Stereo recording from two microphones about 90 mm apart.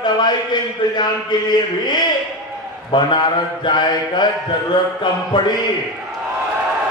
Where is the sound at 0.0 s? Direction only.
55° left (ahead or behind).